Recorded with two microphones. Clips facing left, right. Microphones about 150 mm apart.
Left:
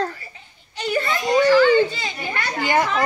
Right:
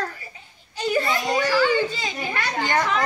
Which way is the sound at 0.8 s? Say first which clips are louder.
Even; 10° right (ahead or behind).